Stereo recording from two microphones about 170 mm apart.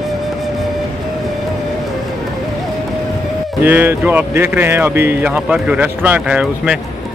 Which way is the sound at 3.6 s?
10° right (ahead or behind).